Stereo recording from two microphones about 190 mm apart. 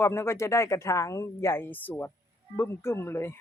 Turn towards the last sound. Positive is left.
turn(degrees=10)  # may be behind; listen again after turning